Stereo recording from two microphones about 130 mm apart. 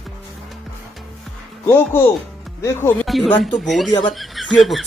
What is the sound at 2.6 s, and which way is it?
Speech, 15° left (ahead or behind).